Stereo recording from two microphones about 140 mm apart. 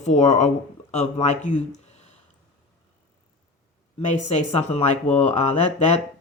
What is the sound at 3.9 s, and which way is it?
A man's voice, 55° left (ahead or behind).